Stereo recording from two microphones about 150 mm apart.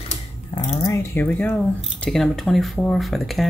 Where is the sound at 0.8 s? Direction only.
15° left (ahead or behind).